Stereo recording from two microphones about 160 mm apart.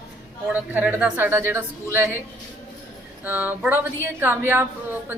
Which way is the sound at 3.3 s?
10° right (ahead or behind).